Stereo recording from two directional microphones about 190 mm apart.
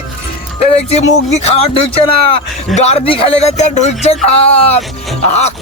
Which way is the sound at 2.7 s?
35° left (ahead or behind).